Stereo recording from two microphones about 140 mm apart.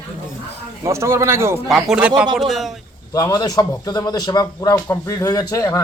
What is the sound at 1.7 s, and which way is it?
Speech, centre (ahead or behind).